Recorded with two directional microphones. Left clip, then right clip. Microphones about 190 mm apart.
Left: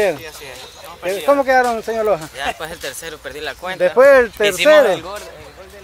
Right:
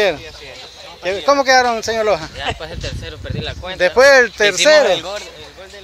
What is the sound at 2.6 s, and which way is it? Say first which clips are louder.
Speech: left 1 dB; 10° left (ahead or behind).